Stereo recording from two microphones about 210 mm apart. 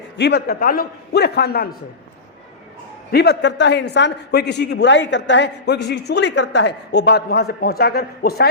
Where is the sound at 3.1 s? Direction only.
50° left (ahead or behind).